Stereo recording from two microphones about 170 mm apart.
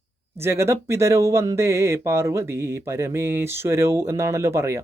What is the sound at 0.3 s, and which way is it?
Speech, 15° right (ahead or behind).